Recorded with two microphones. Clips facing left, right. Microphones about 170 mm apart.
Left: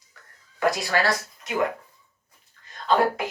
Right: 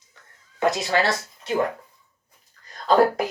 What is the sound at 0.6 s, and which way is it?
Speech, 20° right (ahead or behind).